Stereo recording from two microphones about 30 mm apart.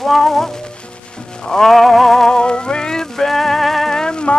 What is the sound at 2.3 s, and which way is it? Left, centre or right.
Music, left.